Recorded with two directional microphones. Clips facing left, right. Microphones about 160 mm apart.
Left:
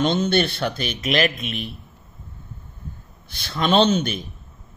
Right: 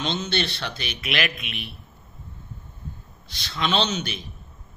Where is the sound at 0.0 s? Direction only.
50° left (ahead or behind).